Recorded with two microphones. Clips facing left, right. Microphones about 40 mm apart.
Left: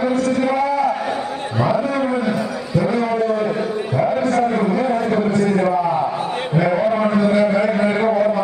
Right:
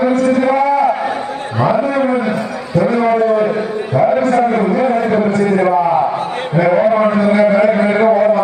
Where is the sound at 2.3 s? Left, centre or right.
Centre.